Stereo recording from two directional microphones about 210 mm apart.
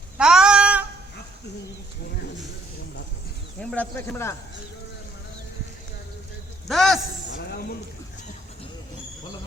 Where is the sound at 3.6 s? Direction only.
5° left (ahead or behind).